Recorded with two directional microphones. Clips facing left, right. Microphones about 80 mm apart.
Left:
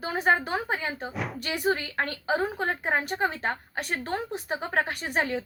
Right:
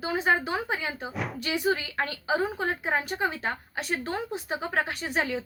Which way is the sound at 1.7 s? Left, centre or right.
Left.